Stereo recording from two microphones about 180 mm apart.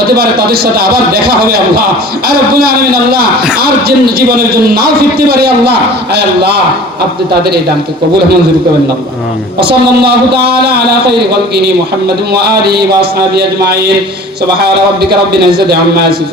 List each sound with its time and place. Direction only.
0.2 s a man's voice: 60° right (ahead or behind)
10.0 s a man's voice: 65° right (ahead or behind)
15.3 s a man's voice: 60° right (ahead or behind)